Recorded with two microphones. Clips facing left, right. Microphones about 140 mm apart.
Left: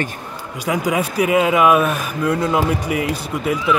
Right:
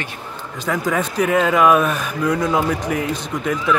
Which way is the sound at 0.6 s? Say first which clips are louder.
Left 1 dB; 10° left (ahead or behind).